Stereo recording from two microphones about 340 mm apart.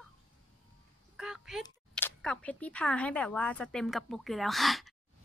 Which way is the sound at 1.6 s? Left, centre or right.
Centre.